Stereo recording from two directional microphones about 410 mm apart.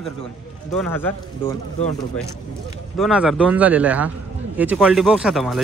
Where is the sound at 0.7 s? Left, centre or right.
Centre.